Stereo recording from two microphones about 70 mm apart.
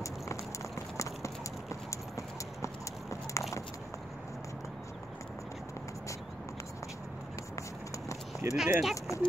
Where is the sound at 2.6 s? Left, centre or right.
Left.